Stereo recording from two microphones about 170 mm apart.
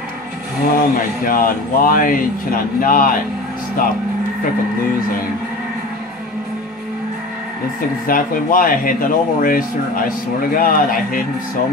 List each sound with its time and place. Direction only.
0.7 s speech: 55° left (ahead or behind)
8.1 s speech: 55° left (ahead or behind)